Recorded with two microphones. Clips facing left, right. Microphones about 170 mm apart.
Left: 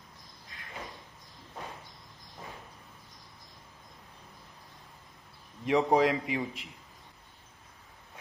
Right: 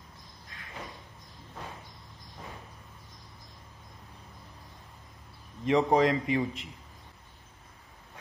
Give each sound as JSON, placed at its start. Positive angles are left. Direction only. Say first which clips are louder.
{"t": 5.7, "sound": "a man's voice", "louder": "right 1 dB", "side_deg": 5}